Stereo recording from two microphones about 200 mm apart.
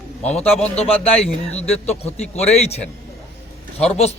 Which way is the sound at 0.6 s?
30° left (ahead or behind).